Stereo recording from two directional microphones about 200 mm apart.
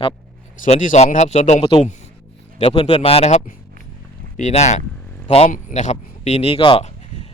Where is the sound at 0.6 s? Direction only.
40° left (ahead or behind).